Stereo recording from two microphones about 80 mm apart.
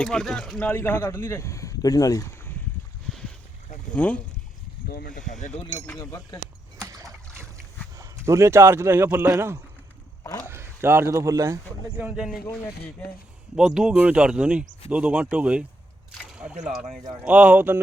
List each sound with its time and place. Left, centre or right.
0.0 s speech: centre
0.6 s speech: left
3.9 s speech: centre
6.0 s speech: left
7.9 s speech: right
10.4 s a sound: right
11.1 s speech: right
12.1 s speech: centre
13.6 s speech: centre